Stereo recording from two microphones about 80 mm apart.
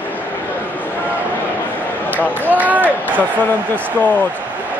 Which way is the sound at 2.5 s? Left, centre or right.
Right.